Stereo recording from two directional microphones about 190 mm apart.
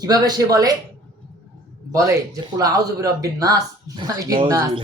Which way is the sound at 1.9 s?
20° right (ahead or behind).